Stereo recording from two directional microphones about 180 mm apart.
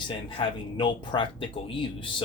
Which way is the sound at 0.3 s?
25° left (ahead or behind).